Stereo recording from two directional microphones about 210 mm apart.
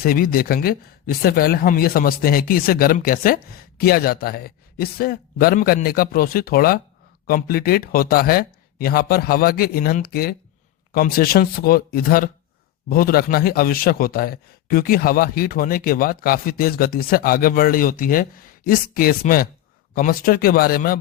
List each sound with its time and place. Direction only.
0.0 s speech: 45° left (ahead or behind)